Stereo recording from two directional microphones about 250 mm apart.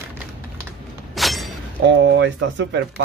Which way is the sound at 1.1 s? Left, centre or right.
Centre.